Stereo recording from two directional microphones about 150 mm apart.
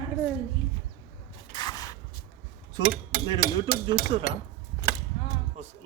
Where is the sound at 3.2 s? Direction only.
35° right (ahead or behind).